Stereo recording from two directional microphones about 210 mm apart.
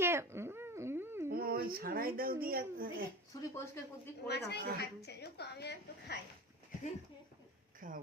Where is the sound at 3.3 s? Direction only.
10° left (ahead or behind).